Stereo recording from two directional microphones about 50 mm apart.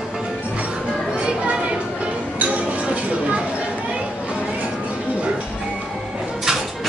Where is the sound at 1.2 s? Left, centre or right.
Centre.